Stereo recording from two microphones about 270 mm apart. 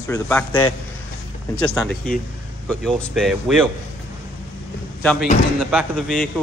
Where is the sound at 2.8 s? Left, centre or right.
Centre.